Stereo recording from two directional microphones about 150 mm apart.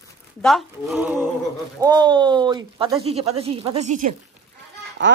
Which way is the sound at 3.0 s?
40° right (ahead or behind).